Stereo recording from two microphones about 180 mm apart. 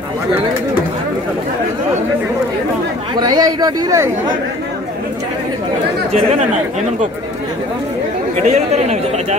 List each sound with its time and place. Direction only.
3.2 s a man's voice: 20° right (ahead or behind)
6.1 s speech: 40° right (ahead or behind)
8.4 s speech: 40° right (ahead or behind)